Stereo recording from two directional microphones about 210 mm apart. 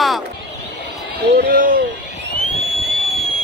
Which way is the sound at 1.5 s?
40° right (ahead or behind).